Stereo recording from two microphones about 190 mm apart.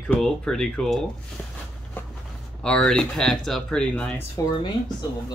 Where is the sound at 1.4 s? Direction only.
5° left (ahead or behind).